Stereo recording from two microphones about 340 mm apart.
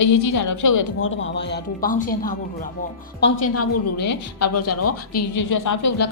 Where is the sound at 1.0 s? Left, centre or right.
Left.